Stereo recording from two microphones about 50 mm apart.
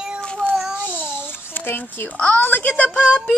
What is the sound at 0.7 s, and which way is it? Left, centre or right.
Babbling, left.